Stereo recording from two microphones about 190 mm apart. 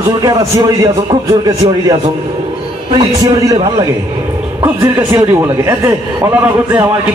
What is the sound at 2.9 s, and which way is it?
Speech, 20° right (ahead or behind).